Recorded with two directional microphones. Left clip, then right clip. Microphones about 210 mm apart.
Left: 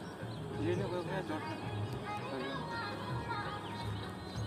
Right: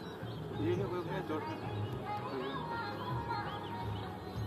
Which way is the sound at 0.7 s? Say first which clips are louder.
Even; 45° left (ahead or behind).